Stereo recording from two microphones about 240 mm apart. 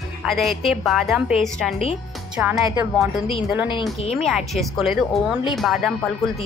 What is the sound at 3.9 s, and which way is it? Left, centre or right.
Speech, left.